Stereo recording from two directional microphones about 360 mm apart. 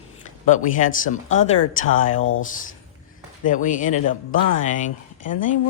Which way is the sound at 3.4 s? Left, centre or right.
Left.